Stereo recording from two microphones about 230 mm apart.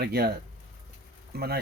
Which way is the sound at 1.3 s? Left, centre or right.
Right.